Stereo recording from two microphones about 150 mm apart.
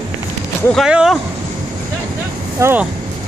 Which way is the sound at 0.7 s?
5° right (ahead or behind).